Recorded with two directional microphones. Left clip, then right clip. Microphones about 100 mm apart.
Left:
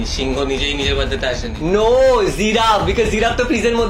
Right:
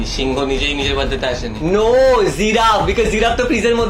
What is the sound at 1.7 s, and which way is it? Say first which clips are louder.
Speech: right 1 dB; 15° right (ahead or behind).